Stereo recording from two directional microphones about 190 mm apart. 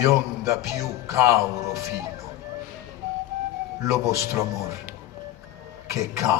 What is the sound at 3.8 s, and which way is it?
Speech, 15° right (ahead or behind).